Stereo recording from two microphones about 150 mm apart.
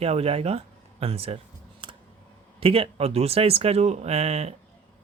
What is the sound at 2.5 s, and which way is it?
Speech, 40° right (ahead or behind).